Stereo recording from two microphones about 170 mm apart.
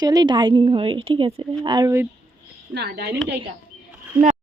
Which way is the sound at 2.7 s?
70° right (ahead or behind).